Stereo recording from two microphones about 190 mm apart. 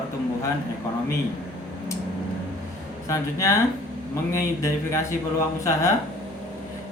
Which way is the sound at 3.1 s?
15° left (ahead or behind).